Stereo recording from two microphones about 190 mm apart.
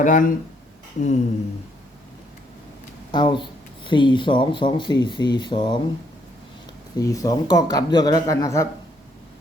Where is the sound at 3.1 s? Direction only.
25° left (ahead or behind).